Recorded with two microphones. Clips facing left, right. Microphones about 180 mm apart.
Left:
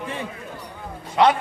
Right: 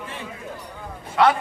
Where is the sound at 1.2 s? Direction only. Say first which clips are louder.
Left 1 dB; 20° left (ahead or behind).